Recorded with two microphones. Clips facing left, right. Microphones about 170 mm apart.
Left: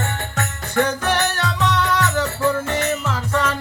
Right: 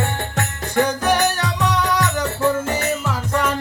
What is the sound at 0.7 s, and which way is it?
Music, 15° right (ahead or behind).